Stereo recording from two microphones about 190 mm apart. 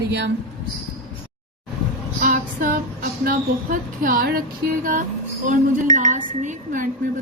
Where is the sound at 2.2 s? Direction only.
45° right (ahead or behind).